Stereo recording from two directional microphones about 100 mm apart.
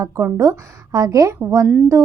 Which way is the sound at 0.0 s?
30° right (ahead or behind).